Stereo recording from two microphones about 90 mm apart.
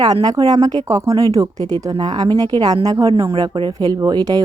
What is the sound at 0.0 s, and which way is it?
Speech, 50° right (ahead or behind).